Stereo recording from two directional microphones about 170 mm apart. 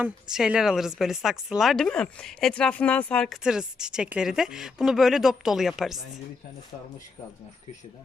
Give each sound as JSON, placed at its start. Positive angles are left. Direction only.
{"t": 0.0, "sound": "speech", "side_deg": -5}